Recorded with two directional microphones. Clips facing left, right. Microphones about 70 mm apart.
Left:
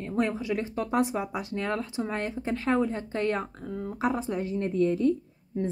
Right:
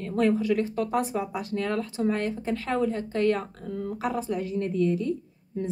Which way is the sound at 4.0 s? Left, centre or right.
Left.